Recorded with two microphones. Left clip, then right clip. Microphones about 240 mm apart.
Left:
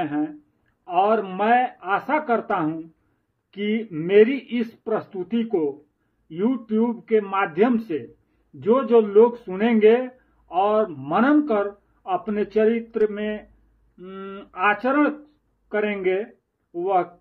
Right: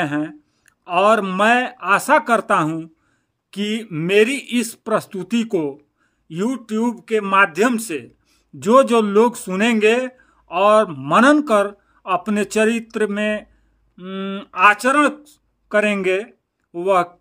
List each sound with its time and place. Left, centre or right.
0.0 s speech: right